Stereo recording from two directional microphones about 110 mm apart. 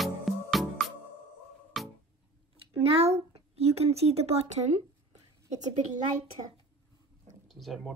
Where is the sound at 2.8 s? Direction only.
70° right (ahead or behind).